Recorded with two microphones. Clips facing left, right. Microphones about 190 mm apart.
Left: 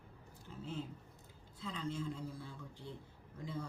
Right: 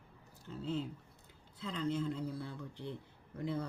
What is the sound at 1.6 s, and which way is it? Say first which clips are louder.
A man's voice: right 5 dB; 65° right (ahead or behind).